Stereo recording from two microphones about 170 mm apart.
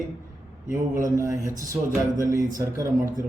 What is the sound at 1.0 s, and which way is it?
A man's voice, 20° right (ahead or behind).